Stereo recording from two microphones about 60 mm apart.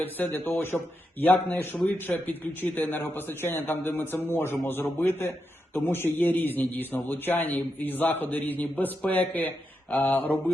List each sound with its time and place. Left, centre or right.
0.3 s a man's voice: left